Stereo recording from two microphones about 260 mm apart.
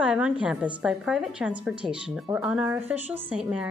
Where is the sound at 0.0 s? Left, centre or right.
Centre.